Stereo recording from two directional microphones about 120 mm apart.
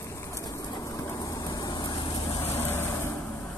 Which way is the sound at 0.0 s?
25° left (ahead or behind).